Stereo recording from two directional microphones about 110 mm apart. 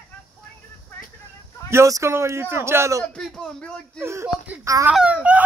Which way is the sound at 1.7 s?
30° right (ahead or behind).